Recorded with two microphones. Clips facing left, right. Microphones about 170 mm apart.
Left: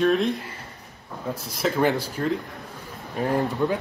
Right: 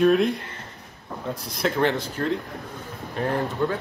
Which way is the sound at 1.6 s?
5° left (ahead or behind).